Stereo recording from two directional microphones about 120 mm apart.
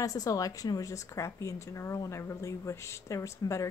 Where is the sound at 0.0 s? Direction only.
30° left (ahead or behind).